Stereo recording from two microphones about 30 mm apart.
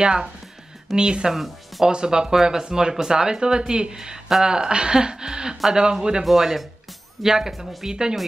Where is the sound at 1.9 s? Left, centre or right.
Right.